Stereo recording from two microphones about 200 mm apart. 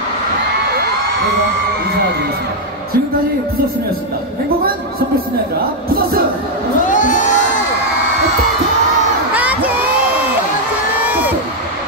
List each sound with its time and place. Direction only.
6.8 s crowd: 40° left (ahead or behind)
9.3 s crowd: 10° right (ahead or behind)